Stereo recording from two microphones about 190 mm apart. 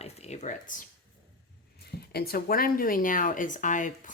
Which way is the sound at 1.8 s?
55° left (ahead or behind).